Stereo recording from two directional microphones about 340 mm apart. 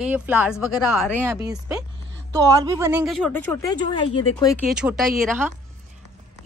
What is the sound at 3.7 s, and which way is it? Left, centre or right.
Speech, centre.